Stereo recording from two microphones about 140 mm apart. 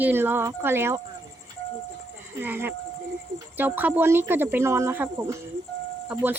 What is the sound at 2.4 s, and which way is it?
A woman's voice, 15° right (ahead or behind).